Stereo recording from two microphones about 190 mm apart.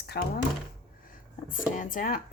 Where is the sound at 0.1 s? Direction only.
55° left (ahead or behind).